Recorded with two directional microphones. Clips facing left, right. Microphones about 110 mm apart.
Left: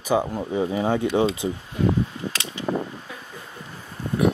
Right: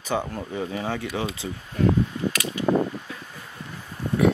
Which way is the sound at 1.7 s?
15° left (ahead or behind).